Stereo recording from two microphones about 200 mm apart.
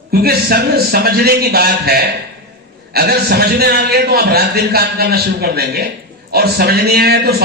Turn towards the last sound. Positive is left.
turn(degrees=-50)  # may be behind; listen again after turning